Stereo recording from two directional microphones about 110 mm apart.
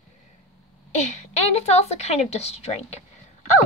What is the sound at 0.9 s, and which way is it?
A woman's voice, 80° left.